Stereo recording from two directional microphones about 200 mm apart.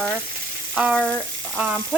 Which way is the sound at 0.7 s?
5° right (ahead or behind).